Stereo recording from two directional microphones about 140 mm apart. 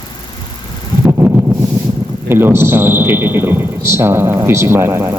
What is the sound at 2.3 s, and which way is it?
A man's voice, 15° right (ahead or behind).